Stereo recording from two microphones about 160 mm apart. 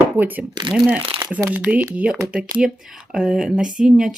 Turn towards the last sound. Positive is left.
turn(degrees=-5)  # may be behind; listen again after turning